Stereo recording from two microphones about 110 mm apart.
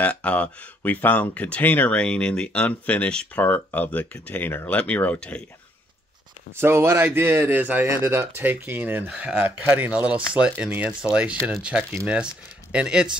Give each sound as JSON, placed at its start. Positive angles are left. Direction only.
{"t": 0.0, "sound": "speech", "side_deg": 10}
{"t": 6.5, "sound": "speech", "side_deg": -25}